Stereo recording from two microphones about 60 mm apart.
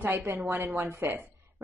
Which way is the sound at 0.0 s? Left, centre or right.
Right.